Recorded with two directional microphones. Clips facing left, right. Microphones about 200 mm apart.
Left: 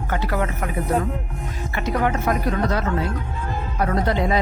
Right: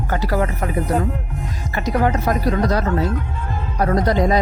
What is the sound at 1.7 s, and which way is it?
Speech, 40° right (ahead or behind).